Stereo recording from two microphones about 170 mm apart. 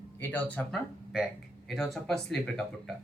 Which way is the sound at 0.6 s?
10° left (ahead or behind).